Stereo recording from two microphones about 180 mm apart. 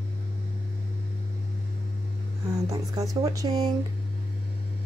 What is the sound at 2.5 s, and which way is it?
Speech, 20° right (ahead or behind).